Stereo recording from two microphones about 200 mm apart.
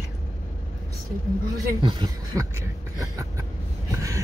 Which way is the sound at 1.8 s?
20° right (ahead or behind).